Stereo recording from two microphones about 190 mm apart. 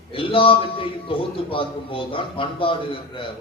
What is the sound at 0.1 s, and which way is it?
A man's voice, 30° left (ahead or behind).